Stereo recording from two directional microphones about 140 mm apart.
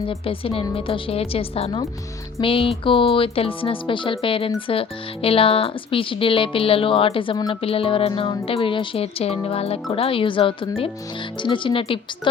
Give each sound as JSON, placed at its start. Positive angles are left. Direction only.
{"t": 0.1, "sound": "speech", "side_deg": 40}